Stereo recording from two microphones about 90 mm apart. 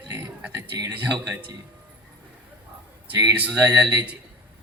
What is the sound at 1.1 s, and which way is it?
Speech, 50° right (ahead or behind).